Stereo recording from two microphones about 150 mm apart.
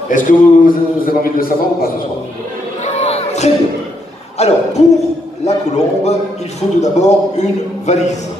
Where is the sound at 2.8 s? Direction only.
50° left (ahead or behind).